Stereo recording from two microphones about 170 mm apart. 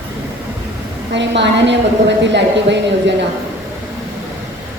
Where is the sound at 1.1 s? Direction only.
90° right.